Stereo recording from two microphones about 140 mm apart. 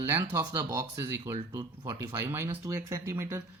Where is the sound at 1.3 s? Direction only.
30° right (ahead or behind).